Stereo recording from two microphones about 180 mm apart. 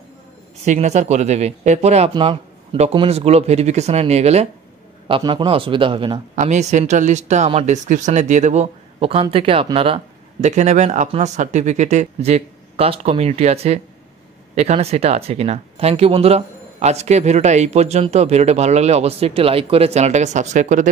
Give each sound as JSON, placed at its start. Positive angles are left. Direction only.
{"t": 0.7, "sound": "a man's voice", "side_deg": -40}
{"t": 6.3, "sound": "speech", "side_deg": -40}